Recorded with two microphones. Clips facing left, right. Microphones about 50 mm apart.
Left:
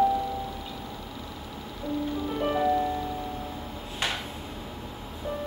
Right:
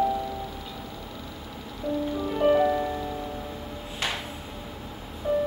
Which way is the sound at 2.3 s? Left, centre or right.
Centre.